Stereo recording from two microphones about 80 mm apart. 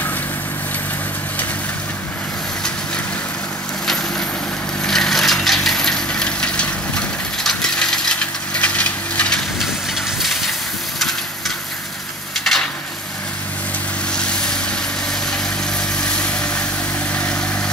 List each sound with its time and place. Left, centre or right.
4.8 s crushing: centre
10.2 s a sound: centre
14.1 s vehicle: centre
16.0 s vehicle: centre